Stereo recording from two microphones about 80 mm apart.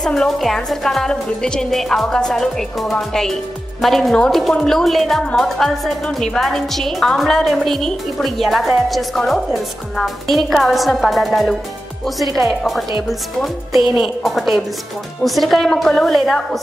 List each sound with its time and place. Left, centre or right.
0.0 s a woman's voice: centre